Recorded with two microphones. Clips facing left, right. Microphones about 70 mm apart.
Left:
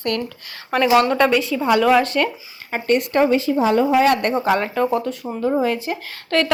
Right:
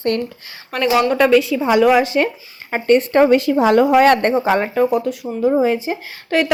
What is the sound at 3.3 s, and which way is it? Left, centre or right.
Speech, right.